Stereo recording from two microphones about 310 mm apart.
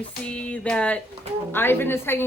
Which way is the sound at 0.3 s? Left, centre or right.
Centre.